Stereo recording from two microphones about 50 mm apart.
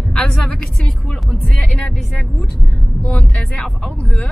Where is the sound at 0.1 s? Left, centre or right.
Centre.